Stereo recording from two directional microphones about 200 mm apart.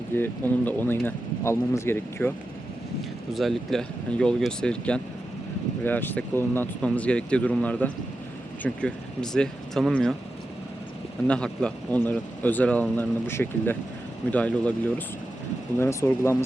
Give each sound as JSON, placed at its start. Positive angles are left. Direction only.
{"t": 0.1, "sound": "speech", "side_deg": 10}
{"t": 3.3, "sound": "speech", "side_deg": 0}
{"t": 11.3, "sound": "speech", "side_deg": 5}